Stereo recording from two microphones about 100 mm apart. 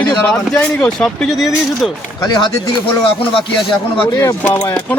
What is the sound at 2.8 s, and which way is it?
Speech, 60° left (ahead or behind).